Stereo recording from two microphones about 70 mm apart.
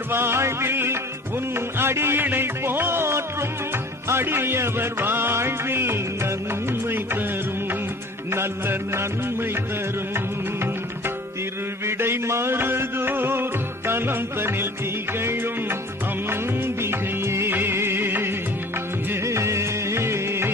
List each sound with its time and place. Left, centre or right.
0.1 s music: right
8.3 s music: right
11.9 s music: right
16.3 s music: right
19.2 s music: right